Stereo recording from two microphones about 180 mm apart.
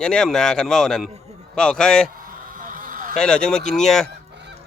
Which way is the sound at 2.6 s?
50° right (ahead or behind).